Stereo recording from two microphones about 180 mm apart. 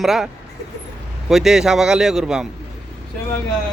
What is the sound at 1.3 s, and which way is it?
Speech, centre (ahead or behind).